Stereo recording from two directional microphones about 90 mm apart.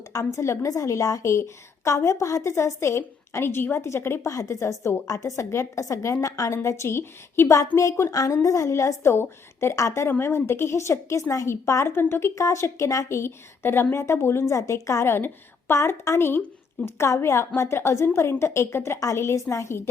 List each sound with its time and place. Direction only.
0.3 s a woman's voice: 35° left (ahead or behind)
8.1 s a woman's voice: 40° left (ahead or behind)